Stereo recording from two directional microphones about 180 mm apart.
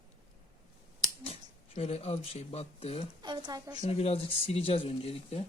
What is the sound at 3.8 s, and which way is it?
Speech, 35° left (ahead or behind).